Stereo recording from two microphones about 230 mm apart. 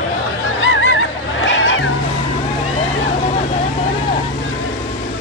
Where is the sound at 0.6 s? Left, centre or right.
Left.